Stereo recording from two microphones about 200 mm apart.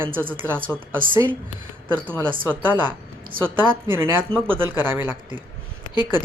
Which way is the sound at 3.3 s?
45° right (ahead or behind).